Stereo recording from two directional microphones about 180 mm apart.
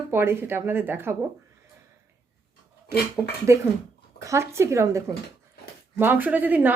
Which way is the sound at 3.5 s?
15° right (ahead or behind).